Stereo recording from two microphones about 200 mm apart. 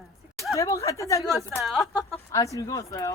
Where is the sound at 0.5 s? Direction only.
15° left (ahead or behind).